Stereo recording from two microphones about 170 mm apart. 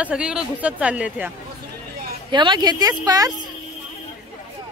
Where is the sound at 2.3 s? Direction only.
25° right (ahead or behind).